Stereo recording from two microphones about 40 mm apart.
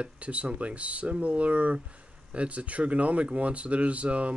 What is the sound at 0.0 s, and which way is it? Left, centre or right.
Speech, right.